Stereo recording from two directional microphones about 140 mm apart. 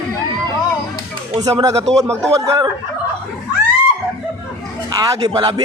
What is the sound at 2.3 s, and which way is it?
Speech, 20° right (ahead or behind).